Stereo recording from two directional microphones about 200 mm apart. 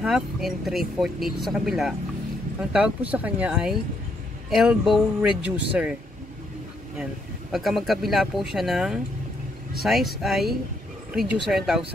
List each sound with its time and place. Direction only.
0.0 s speech: centre (ahead or behind)
7.5 s speech: centre (ahead or behind)